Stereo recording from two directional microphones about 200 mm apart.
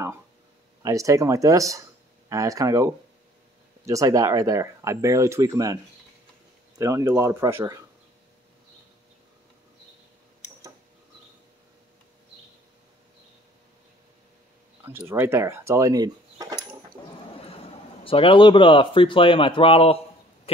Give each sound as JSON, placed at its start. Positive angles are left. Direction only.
{"t": 0.8, "sound": "speech", "side_deg": -15}
{"t": 6.8, "sound": "speech", "side_deg": -15}
{"t": 14.8, "sound": "speech", "side_deg": -10}
{"t": 18.0, "sound": "speech", "side_deg": 25}